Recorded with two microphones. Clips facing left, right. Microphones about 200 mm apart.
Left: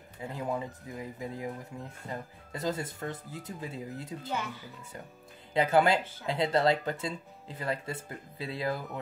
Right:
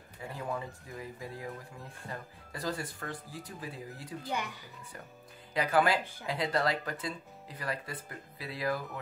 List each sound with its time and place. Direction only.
0.2 s speech: 20° left (ahead or behind)
5.5 s speech: 25° left (ahead or behind)